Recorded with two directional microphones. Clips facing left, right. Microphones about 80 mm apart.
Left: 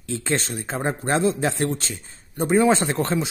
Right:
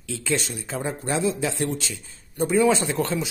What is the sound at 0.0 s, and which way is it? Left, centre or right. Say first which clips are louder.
A man's voice: left 1 dB; left.